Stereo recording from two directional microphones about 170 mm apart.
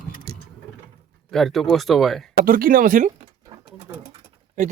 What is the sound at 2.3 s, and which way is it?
Speech, 55° right (ahead or behind).